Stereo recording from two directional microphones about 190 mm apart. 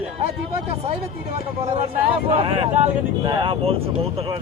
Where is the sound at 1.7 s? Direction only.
30° right (ahead or behind).